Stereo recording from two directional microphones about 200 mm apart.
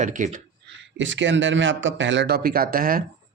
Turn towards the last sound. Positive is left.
turn(degrees=-45)  # may be behind; listen again after turning